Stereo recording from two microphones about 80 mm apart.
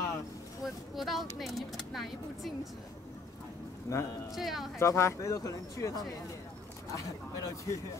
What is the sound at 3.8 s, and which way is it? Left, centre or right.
Speech, left.